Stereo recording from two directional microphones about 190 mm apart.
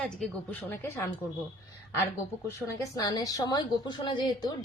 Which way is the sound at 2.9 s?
20° left (ahead or behind).